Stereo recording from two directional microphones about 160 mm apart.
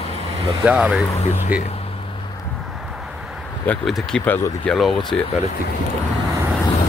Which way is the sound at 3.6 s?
5° left (ahead or behind).